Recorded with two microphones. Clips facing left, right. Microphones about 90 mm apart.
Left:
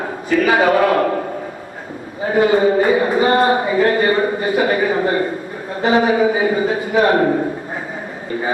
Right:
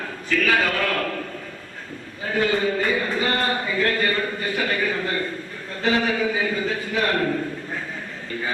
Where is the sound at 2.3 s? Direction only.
25° left (ahead or behind).